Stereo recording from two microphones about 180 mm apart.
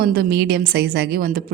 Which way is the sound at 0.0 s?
60° right (ahead or behind).